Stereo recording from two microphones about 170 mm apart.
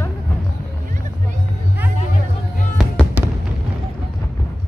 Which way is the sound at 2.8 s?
Centre (ahead or behind).